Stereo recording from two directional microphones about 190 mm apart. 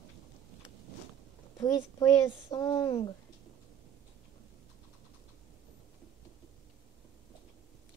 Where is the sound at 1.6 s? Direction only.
20° left (ahead or behind).